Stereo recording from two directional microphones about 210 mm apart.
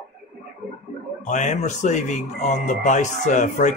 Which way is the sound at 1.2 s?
35° left (ahead or behind).